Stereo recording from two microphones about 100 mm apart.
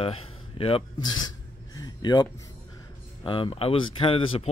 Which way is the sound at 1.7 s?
40° left (ahead or behind).